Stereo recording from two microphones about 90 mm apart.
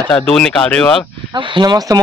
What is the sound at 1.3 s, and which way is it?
Speech, 60° right (ahead or behind).